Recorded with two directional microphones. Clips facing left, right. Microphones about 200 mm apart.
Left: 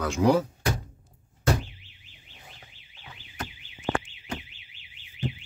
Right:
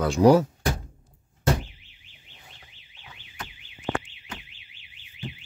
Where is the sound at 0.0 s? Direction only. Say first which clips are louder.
Right 5 dB; 35° right (ahead or behind).